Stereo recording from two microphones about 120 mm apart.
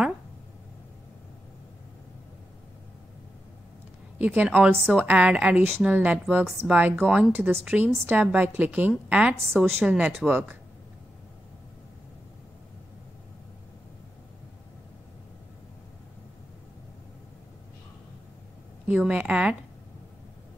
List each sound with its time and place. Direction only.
4.2 s a woman's voice: 10° right (ahead or behind)
7.1 s a woman's voice: 5° right (ahead or behind)
7.6 s a woman's voice: 15° right (ahead or behind)
9.5 s a woman's voice: 5° left (ahead or behind)
9.8 s a woman's voice: 10° right (ahead or behind)
18.9 s a woman's voice: 10° right (ahead or behind)